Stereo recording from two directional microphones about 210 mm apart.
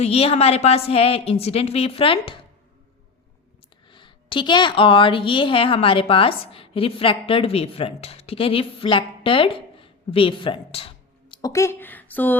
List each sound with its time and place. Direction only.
0.0 s a woman's voice: 30° left (ahead or behind)
3.9 s a woman's voice: 25° left (ahead or behind)